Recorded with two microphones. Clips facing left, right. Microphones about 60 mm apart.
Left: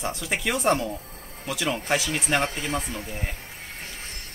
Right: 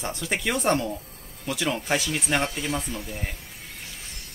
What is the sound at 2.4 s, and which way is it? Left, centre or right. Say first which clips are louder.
Speech: even; left.